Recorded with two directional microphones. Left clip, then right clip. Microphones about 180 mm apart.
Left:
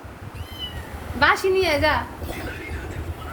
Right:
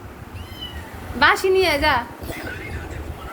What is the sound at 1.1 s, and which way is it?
Speech, 15° right (ahead or behind).